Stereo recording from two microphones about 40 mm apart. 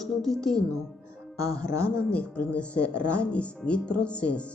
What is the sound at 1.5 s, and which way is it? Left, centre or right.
A woman's voice, left.